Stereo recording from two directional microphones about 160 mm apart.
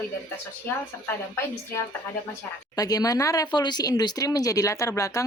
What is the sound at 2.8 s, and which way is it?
Speech, 25° left (ahead or behind).